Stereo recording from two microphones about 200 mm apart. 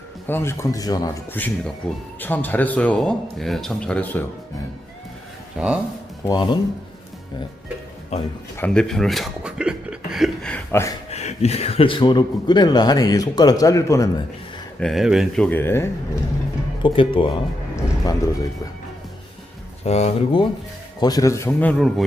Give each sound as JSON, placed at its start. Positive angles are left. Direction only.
{"t": 0.3, "sound": "speech", "side_deg": 10}
{"t": 5.5, "sound": "speech", "side_deg": -5}
{"t": 6.2, "sound": "a man's voice", "side_deg": 20}
{"t": 8.1, "sound": "speech", "side_deg": 30}
{"t": 8.5, "sound": "speech", "side_deg": 5}
{"t": 11.1, "sound": "a man's voice", "side_deg": 35}
{"t": 14.8, "sound": "speech", "side_deg": 0}
{"t": 16.8, "sound": "a man's voice", "side_deg": 25}
{"t": 19.8, "sound": "speech", "side_deg": 35}
{"t": 21.0, "sound": "speech", "side_deg": 20}